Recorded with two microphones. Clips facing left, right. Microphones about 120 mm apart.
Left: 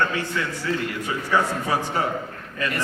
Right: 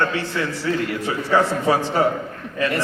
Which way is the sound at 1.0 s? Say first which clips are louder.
Right 4 dB; 30° right (ahead or behind).